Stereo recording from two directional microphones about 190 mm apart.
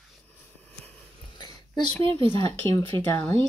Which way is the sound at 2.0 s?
25° right (ahead or behind).